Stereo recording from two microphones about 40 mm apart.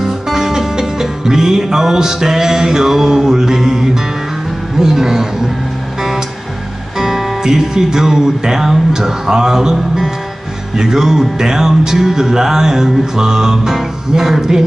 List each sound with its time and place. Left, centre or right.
0.0 s music: centre
7.0 s music: centre